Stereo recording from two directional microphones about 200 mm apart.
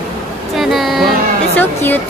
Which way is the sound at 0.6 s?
Centre (ahead or behind).